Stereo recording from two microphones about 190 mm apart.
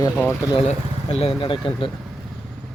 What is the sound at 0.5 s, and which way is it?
Speech, 30° left (ahead or behind).